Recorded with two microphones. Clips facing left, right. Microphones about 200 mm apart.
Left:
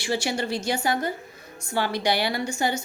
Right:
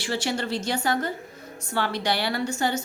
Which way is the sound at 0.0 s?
10° left (ahead or behind).